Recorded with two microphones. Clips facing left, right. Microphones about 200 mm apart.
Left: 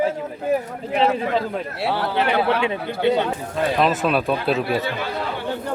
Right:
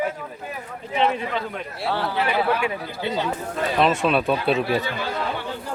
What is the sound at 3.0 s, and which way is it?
Speech, 65° left (ahead or behind).